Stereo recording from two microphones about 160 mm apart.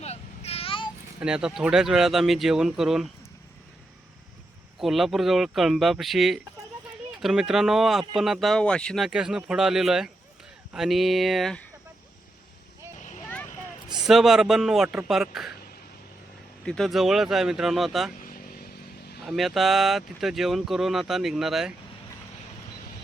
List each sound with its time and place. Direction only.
0.0 s vehicle: 40° left (ahead or behind)
1.2 s speech: 5° right (ahead or behind)
4.8 s speech: centre (ahead or behind)
9.0 s speech: 5° right (ahead or behind)
13.9 s speech: centre (ahead or behind)
16.6 s speech: centre (ahead or behind)
18.2 s vehicle: 60° left (ahead or behind)
19.2 s speech: centre (ahead or behind)